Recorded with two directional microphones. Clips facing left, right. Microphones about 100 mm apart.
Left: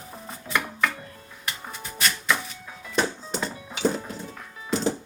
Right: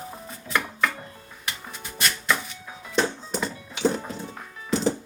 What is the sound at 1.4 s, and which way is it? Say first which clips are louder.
Music: left 1 dB; centre (ahead or behind).